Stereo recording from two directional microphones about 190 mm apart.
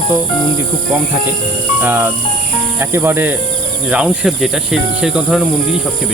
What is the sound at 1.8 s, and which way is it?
Speech, 10° right (ahead or behind).